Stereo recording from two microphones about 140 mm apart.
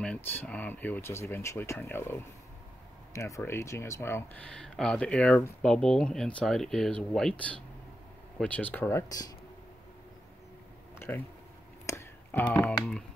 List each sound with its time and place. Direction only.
0.0 s speech: 10° left (ahead or behind)
11.0 s speech: 15° left (ahead or behind)
11.8 s a sound: 20° left (ahead or behind)
12.6 s speech: 5° left (ahead or behind)